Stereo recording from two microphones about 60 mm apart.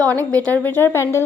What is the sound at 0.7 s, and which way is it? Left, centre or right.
Speech, left.